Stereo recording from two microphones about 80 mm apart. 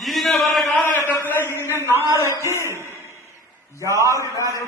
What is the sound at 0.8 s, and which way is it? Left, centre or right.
Speech, left.